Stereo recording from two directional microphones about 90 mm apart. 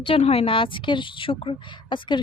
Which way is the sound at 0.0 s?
90° left.